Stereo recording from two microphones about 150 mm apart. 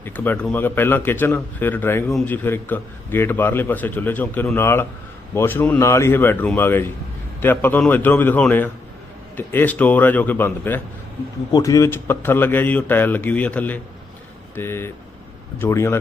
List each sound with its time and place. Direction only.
0.0 s a man's voice: 15° left (ahead or behind)